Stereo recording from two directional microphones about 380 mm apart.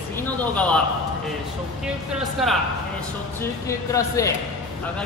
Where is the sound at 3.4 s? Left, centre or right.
Centre.